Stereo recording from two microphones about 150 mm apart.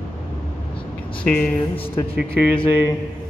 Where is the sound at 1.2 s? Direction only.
10° left (ahead or behind).